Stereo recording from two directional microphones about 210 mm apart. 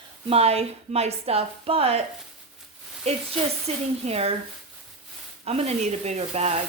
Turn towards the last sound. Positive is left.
turn(degrees=-30)  # may be behind; listen again after turning